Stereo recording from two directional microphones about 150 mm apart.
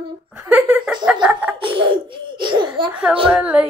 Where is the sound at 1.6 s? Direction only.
35° right (ahead or behind).